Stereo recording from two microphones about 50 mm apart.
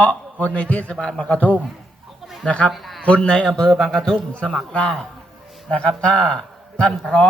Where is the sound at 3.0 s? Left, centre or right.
Left.